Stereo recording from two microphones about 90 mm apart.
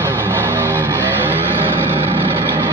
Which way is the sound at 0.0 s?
25° right (ahead or behind).